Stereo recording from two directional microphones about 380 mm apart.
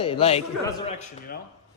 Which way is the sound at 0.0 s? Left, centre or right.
Centre.